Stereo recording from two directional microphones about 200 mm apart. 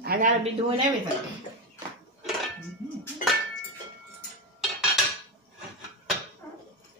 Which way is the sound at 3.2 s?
40° left (ahead or behind).